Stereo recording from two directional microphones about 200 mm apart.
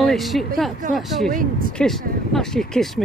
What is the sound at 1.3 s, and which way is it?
Speech, 45° right (ahead or behind).